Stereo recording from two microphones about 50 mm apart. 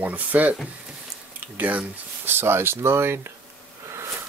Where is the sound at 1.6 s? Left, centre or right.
Right.